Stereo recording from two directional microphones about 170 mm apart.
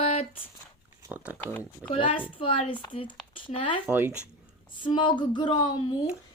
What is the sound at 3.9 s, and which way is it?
Speech, 10° right (ahead or behind).